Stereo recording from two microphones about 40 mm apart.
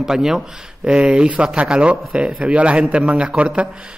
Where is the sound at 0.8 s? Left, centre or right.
Right.